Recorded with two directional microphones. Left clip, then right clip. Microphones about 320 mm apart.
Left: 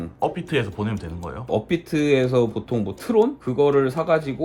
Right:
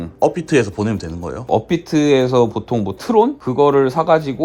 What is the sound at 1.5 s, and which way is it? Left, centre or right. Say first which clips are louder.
Speech: right 6 dB; right.